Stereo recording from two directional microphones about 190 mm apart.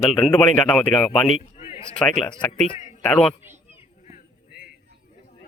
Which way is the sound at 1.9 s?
5° left (ahead or behind).